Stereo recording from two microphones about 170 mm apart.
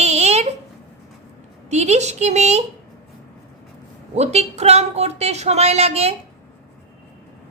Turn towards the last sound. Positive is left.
turn(degrees=-40)  # may be behind; listen again after turning